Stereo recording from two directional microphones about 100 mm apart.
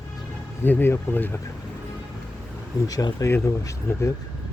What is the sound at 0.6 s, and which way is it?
Speech, 20° left (ahead or behind).